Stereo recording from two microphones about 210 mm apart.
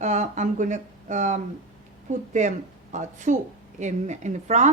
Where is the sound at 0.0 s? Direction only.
35° right (ahead or behind).